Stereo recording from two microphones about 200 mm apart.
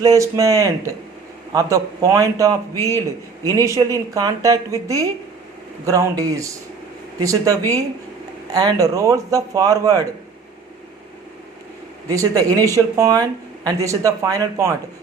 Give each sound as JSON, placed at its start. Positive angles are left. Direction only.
{"t": 0.0, "sound": "a woman's voice", "side_deg": -15}
{"t": 12.0, "sound": "a woman's voice", "side_deg": -15}